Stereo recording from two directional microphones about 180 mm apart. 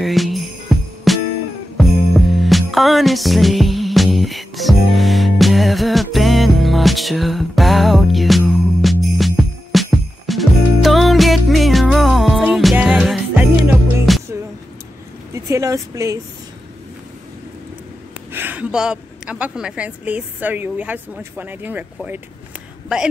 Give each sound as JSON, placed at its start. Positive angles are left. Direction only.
{"t": 0.0, "sound": "jingle bell", "side_deg": 0}
{"t": 1.1, "sound": "music", "side_deg": 0}
{"t": 15.3, "sound": "a sound", "side_deg": -15}
{"t": 18.3, "sound": "a woman's voice", "side_deg": -10}